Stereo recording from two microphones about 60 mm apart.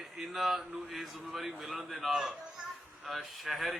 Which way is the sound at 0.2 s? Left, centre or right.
Centre.